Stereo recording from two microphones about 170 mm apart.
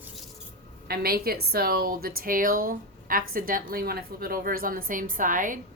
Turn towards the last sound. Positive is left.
turn(degrees=-50)  # may be behind; listen again after turning